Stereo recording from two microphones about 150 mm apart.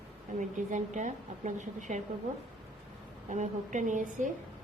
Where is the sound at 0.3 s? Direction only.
60° right (ahead or behind).